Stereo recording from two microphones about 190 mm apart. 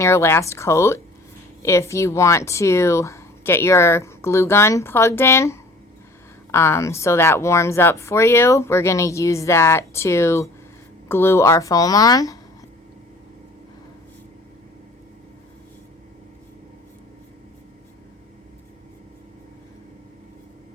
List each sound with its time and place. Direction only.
0.0 s speech: 15° left (ahead or behind)